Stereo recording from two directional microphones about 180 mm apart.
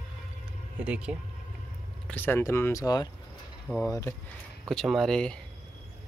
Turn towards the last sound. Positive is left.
turn(degrees=5)  # may be behind; listen again after turning